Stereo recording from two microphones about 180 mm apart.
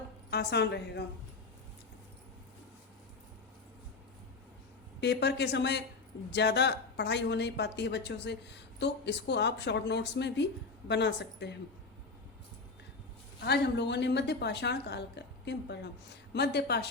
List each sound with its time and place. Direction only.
0.3 s a woman's voice: 65° left (ahead or behind)
4.9 s a woman's voice: 70° left (ahead or behind)
13.4 s a woman's voice: 70° left (ahead or behind)